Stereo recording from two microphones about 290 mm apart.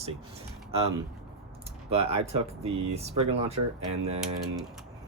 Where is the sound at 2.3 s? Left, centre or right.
Right.